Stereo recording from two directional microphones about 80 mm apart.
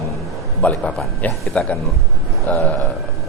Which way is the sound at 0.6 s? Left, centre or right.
Centre.